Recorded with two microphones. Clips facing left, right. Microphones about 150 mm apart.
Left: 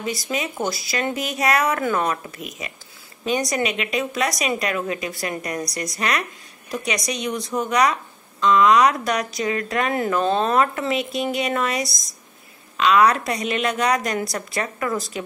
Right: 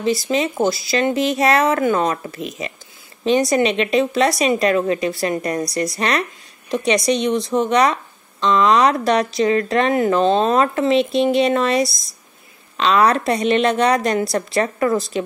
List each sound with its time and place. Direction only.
0.0 s speech: 30° right (ahead or behind)